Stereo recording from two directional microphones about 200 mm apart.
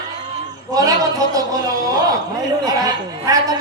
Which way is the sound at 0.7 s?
15° right (ahead or behind).